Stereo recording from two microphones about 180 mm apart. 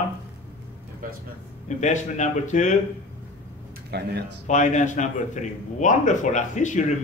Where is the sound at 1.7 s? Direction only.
40° left (ahead or behind).